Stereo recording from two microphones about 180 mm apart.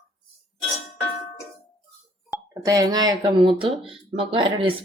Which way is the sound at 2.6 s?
20° right (ahead or behind).